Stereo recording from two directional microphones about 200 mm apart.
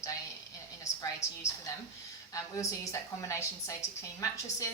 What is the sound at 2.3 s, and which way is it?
Speech, 15° left (ahead or behind).